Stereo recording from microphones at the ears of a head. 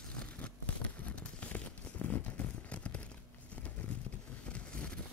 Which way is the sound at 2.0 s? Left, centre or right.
Left.